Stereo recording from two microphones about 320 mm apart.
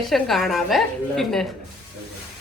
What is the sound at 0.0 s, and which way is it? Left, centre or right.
A woman's voice, centre.